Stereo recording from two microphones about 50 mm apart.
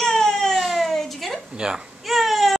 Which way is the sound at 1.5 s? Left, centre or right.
Centre.